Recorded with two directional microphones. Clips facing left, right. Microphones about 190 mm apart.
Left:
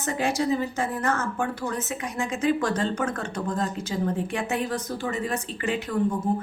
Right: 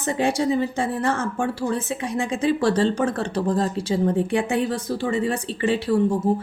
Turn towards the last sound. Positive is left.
turn(degrees=-30)  # may be behind; listen again after turning